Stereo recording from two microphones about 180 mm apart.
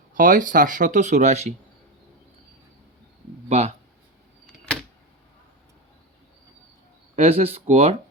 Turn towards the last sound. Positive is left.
turn(degrees=-35)  # may be behind; listen again after turning